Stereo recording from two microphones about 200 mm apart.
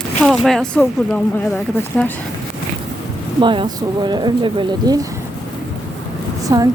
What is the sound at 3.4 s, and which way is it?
Speech, 25° right (ahead or behind).